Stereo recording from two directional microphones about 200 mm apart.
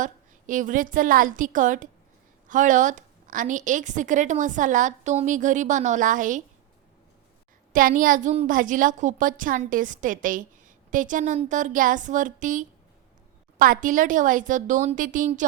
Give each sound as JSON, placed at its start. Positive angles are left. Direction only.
{"t": 0.0, "sound": "a woman's voice", "side_deg": -40}
{"t": 7.7, "sound": "a woman's voice", "side_deg": -40}